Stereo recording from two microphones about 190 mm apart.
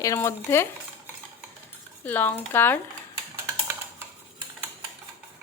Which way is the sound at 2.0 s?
10° left (ahead or behind).